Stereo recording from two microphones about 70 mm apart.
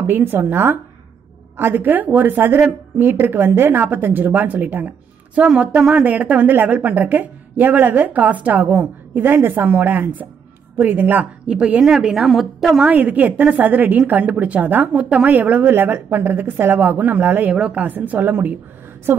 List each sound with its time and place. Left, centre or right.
0.0 s a woman's voice: right
11.4 s speech: centre
12.0 s a woman's voice: centre
12.8 s a woman's voice: right